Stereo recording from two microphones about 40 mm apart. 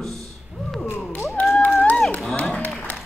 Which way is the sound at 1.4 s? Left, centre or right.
Left.